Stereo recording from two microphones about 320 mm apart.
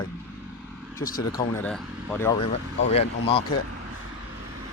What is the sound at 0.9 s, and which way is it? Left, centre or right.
Speech, left.